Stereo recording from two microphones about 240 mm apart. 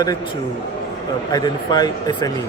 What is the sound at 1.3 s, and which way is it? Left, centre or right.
Speech, centre.